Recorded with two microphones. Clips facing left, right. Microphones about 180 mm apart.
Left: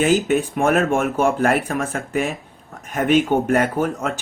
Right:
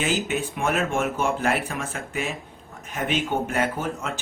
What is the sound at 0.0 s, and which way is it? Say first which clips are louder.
Speech: left 8 dB; 50° left (ahead or behind).